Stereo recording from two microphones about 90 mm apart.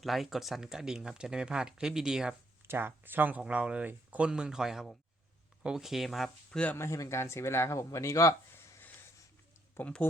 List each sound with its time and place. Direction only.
0.0 s speech: centre (ahead or behind)
2.6 s speech: 25° right (ahead or behind); by 6.7 s 10° left (ahead or behind)
6.7 s speech: 35° left (ahead or behind)
8.5 s a sound: 30° left (ahead or behind)
9.7 s speech: 15° left (ahead or behind)